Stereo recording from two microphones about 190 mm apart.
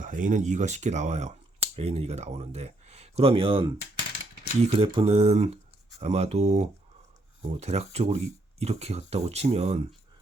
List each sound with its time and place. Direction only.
0.0 s speech: 45° right (ahead or behind)
4.7 s speech: 30° right (ahead or behind)